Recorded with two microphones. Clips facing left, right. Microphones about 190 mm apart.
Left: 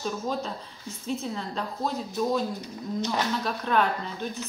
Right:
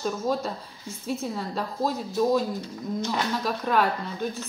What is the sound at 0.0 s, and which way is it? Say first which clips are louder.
A woman's voice: right 3 dB; centre (ahead or behind).